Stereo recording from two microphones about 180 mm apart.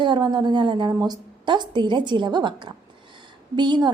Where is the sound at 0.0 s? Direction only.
25° right (ahead or behind).